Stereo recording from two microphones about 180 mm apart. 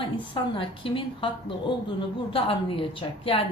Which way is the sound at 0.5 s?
30° left (ahead or behind).